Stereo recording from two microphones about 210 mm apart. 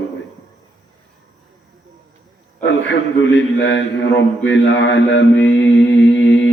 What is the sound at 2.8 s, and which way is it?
Mantra, 60° left (ahead or behind).